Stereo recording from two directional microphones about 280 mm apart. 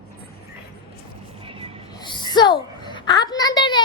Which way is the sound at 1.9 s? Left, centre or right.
Centre.